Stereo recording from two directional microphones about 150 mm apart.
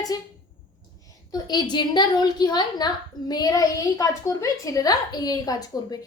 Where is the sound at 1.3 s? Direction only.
30° left (ahead or behind).